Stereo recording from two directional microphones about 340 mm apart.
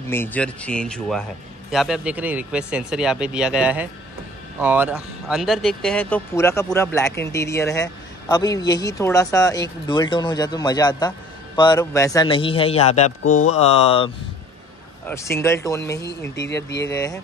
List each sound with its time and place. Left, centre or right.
0.1 s speech: centre